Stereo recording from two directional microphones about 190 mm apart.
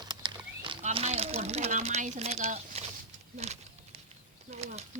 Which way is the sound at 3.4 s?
35° right (ahead or behind).